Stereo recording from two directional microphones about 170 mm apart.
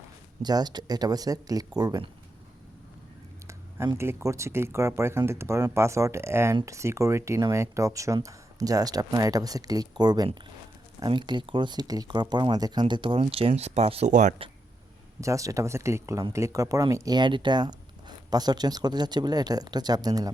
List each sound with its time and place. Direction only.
0.4 s speech: 25° right (ahead or behind)
3.4 s speech: 15° right (ahead or behind); by 14.3 s 45° right (ahead or behind)
15.2 s speech: 20° right (ahead or behind)